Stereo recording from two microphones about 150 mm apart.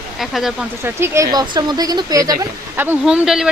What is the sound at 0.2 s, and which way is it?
Speech, centre (ahead or behind).